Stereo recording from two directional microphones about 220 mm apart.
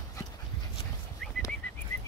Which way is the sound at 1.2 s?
Centre (ahead or behind).